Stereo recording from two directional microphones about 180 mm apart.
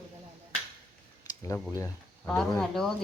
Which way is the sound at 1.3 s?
20° left (ahead or behind).